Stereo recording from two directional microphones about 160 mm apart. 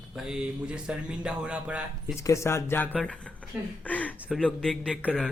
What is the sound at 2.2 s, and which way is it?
Speech, 20° left (ahead or behind).